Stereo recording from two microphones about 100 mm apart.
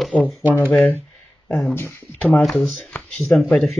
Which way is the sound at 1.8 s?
20° left (ahead or behind).